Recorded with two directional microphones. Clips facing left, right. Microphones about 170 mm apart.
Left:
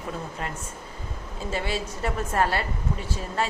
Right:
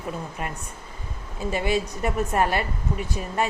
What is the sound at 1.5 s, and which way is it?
A woman's voice, 15° right (ahead or behind).